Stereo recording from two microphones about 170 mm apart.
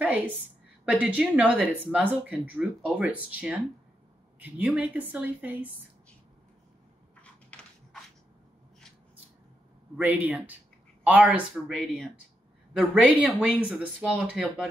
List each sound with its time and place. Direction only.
0.0 s a woman's voice: 10° right (ahead or behind)
9.9 s a woman's voice: 10° right (ahead or behind)